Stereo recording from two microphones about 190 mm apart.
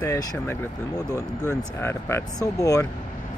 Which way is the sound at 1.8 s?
10° left (ahead or behind).